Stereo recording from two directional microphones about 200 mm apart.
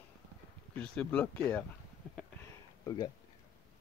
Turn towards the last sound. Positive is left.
turn(degrees=20)  # may be behind; listen again after turning